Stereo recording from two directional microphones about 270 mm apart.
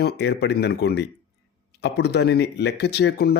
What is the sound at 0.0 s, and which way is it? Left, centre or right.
Speech, left.